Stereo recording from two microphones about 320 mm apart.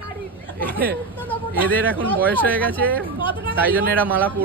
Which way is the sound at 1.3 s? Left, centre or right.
Centre.